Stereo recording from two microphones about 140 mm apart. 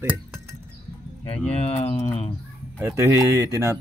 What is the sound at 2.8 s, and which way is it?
Speech, 15° right (ahead or behind).